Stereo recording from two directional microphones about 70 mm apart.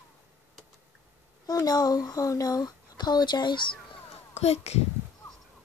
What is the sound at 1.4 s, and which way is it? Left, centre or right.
Speech, left.